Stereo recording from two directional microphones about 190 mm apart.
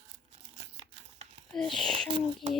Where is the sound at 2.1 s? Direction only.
25° right (ahead or behind).